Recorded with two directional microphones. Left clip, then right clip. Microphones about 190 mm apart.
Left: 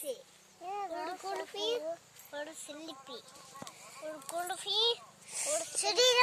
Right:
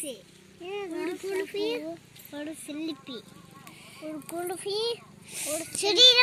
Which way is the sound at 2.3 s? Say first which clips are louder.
Right 5 dB; 30° right (ahead or behind).